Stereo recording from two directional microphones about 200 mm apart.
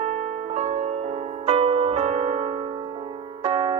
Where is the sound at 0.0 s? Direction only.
35° right (ahead or behind).